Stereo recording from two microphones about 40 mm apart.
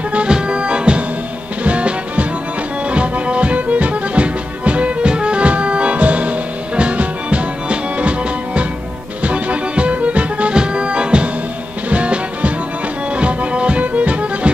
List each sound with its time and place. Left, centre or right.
0.3 s music: right
10.5 s music: right